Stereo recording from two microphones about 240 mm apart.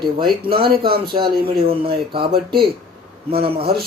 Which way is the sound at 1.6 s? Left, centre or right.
Right.